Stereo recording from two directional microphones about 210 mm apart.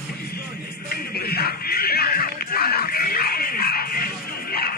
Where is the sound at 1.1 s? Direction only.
45° left (ahead or behind).